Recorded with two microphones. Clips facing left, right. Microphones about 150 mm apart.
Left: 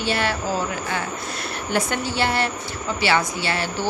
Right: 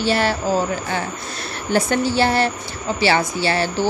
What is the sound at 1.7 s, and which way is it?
Speech, 35° right (ahead or behind).